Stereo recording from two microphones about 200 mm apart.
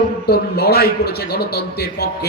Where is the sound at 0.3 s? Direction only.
50° left (ahead or behind).